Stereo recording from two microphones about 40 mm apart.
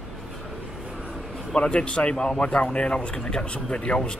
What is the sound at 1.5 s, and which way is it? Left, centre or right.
Speech, left.